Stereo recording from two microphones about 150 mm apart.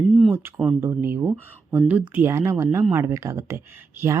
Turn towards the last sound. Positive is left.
turn(degrees=-15)  # may be behind; listen again after turning